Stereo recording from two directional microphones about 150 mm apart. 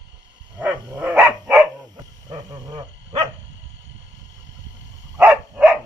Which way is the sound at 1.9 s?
25° right (ahead or behind).